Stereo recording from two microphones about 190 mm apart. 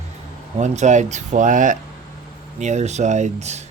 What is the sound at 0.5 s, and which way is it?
Speech, 40° right (ahead or behind).